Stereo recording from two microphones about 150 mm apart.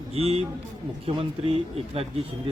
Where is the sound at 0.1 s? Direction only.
40° right (ahead or behind).